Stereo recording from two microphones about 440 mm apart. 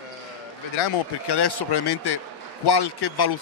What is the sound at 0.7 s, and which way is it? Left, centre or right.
Speech, left.